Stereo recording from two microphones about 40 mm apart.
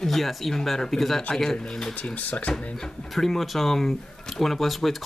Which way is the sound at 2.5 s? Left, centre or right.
Left.